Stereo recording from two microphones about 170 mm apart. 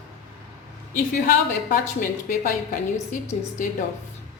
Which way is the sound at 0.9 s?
55° left (ahead or behind).